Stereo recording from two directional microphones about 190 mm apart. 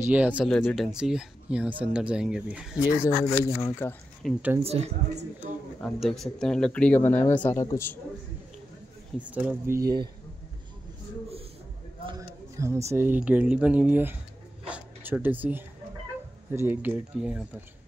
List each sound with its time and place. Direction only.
0.1 s speech: 5° right (ahead or behind)
3.3 s speech: 15° left (ahead or behind)
4.2 s speech: 10° right (ahead or behind)
4.6 s a woman's voice: 35° right (ahead or behind)
5.8 s speech: 5° left (ahead or behind)
9.2 s speech: 10° right (ahead or behind)
12.1 s a sound: 15° right (ahead or behind)
12.9 s speech: 10° right (ahead or behind)
14.7 s a sound: 10° right (ahead or behind)
16.5 s speech: 10° right (ahead or behind)